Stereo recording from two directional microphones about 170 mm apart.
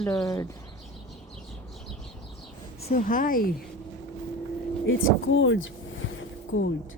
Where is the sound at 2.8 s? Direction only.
50° left (ahead or behind).